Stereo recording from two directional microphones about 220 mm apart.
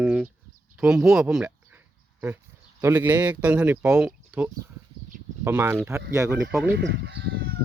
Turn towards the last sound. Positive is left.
turn(degrees=-45)  # may be behind; listen again after turning